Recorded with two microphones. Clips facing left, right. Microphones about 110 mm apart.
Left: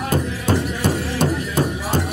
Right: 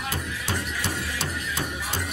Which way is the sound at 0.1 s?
50° left (ahead or behind).